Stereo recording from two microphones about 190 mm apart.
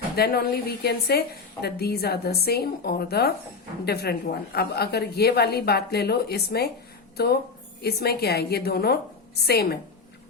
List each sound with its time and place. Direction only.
0.2 s a woman's voice: 55° left (ahead or behind)
7.8 s a woman's voice: 55° left (ahead or behind)